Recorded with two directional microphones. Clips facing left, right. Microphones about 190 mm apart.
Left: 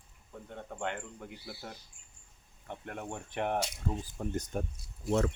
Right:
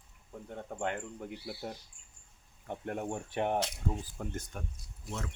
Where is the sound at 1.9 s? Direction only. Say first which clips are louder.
Left 1 dB; 35° right (ahead or behind).